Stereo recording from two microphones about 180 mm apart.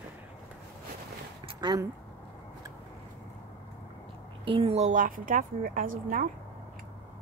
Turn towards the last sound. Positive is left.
turn(degrees=-50)  # may be behind; listen again after turning